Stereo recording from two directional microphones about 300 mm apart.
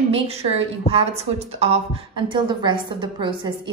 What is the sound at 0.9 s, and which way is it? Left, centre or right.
A woman's voice, centre.